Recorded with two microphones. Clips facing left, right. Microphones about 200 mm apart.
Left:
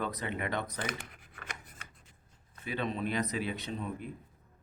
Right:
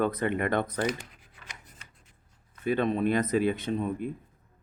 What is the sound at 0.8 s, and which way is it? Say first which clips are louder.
Shuffling cards: right 8 dB; 55° left (ahead or behind).